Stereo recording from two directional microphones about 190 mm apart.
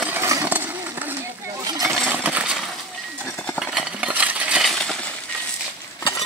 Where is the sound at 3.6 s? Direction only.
5° right (ahead or behind).